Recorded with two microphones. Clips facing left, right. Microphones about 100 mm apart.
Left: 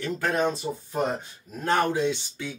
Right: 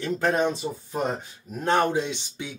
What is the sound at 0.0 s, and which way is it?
Speech, 25° right (ahead or behind).